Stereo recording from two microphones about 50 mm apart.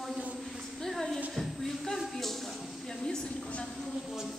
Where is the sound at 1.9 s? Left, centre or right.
Centre.